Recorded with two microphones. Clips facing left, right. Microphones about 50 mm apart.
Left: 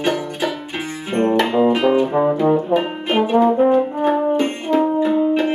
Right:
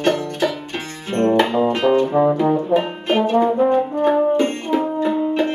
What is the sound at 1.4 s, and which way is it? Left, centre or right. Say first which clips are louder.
Music: left 2 dB; centre.